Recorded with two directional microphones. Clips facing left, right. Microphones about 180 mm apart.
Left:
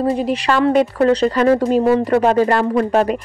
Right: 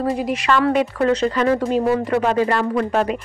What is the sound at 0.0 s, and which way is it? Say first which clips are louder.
A woman's voice: left 3 dB; 25° left (ahead or behind).